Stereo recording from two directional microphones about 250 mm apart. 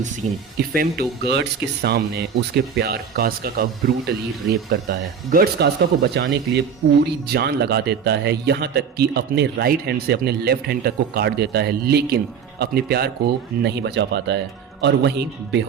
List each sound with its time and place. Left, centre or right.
0.5 s speech: right
4.7 s speech: right